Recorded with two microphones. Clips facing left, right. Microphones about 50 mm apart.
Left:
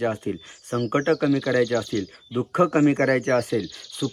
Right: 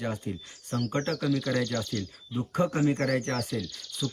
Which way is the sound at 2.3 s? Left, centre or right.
Left.